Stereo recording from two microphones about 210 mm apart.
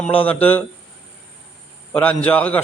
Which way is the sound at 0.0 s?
25° left (ahead or behind).